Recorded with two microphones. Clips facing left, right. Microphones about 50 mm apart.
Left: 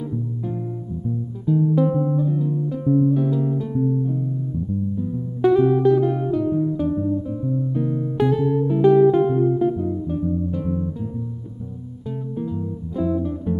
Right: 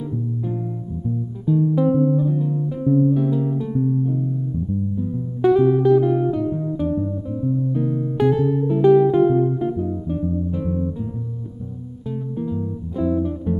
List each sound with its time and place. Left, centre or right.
1.5 s music: centre
2.3 s guitar: centre
2.8 s music: centre
3.3 s music: centre
12.4 s guitar: centre